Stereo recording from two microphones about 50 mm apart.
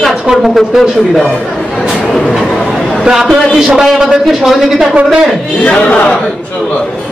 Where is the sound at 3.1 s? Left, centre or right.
Centre.